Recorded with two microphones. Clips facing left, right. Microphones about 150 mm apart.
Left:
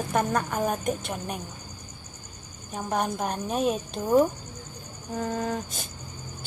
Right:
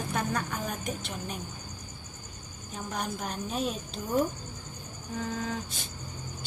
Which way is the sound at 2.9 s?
55° left (ahead or behind).